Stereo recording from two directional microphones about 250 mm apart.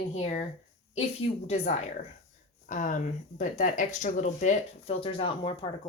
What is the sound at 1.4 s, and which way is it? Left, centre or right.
Speech, left.